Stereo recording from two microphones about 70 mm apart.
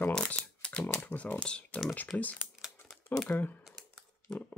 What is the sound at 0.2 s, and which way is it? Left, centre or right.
Typewriter, centre.